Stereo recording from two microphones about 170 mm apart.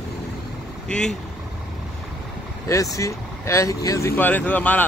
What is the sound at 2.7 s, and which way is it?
Speech, 20° left (ahead or behind).